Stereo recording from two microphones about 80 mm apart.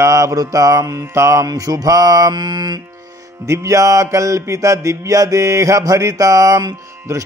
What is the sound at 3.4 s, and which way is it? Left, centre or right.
Mantra, right.